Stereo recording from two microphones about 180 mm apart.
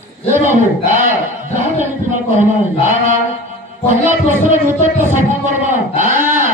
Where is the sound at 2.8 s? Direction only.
45° right (ahead or behind).